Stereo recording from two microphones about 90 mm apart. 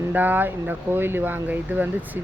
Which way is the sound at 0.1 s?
20° right (ahead or behind).